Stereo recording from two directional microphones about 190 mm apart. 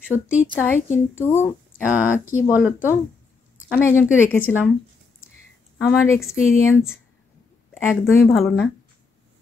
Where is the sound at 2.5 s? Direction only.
10° right (ahead or behind).